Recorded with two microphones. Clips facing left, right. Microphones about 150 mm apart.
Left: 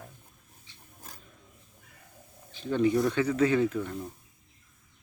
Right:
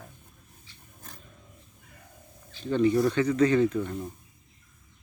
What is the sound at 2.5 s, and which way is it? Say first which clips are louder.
Speech: right 2 dB; 10° left (ahead or behind).